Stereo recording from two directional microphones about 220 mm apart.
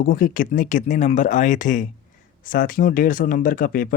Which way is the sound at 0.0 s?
40° left (ahead or behind).